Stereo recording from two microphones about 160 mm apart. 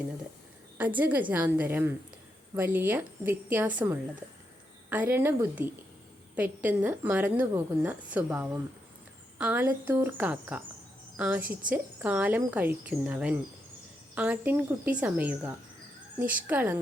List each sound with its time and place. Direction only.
0.8 s a woman's voice: 10° right (ahead or behind)